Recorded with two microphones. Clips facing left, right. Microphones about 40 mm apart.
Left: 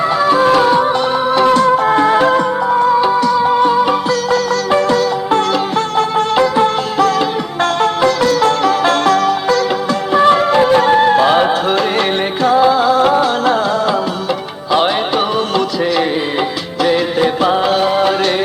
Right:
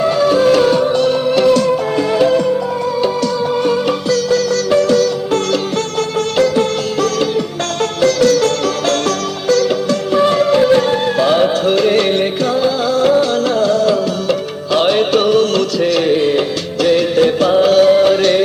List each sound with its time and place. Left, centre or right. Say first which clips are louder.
0.0 s music: even; centre; by 2.4 s left
3.0 s music: left 4 dB; left
4.1 s sitar: even; left
6.0 s music: left 2 dB; centre